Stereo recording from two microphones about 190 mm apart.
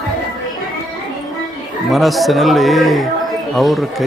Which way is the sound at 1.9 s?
Centre (ahead or behind).